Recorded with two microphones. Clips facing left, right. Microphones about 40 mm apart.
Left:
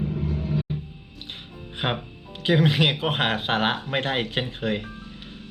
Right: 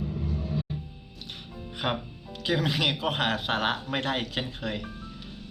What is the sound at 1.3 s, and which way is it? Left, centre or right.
Speech, left.